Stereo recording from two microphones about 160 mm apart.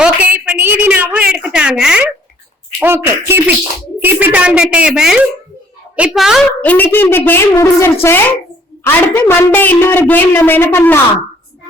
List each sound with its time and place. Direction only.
0.0 s a sound: 5° right (ahead or behind)
1.5 s a woman's voice: 5° right (ahead or behind)
6.7 s a woman's voice: 10° left (ahead or behind)